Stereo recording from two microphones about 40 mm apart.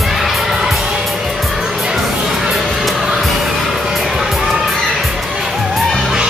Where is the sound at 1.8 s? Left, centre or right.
Centre.